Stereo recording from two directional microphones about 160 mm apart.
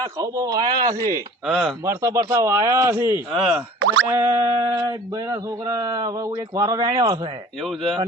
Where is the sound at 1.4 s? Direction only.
Centre (ahead or behind).